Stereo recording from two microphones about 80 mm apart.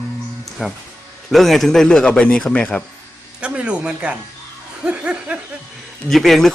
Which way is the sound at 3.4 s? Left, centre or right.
Centre.